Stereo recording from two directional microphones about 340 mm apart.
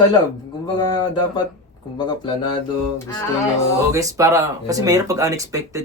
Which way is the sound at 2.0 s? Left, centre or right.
Centre.